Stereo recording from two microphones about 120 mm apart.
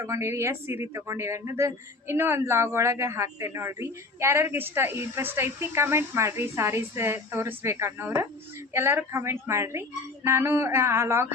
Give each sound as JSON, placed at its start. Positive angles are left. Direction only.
{"t": 0.0, "sound": "speech", "side_deg": -25}